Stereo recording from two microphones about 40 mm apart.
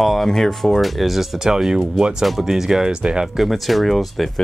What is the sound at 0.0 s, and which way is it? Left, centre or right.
Music, centre.